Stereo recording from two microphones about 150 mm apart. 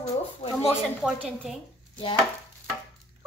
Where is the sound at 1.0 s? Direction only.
5° right (ahead or behind).